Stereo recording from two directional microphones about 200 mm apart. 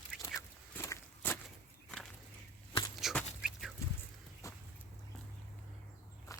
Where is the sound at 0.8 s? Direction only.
15° left (ahead or behind).